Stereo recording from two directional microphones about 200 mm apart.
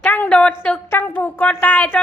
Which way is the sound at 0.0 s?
10° left (ahead or behind).